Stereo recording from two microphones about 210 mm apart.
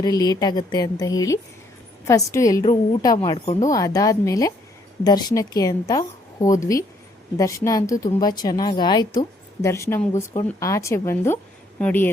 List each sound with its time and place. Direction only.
0.0 s a woman's voice: 20° left (ahead or behind)
3.2 s a woman's voice: 25° left (ahead or behind)
3.7 s a woman's voice: 15° left (ahead or behind)